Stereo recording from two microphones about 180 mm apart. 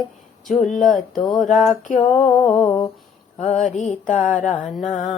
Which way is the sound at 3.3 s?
40° left (ahead or behind).